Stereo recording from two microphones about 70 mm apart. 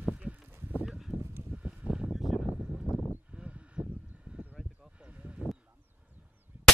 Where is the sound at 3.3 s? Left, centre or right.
Centre.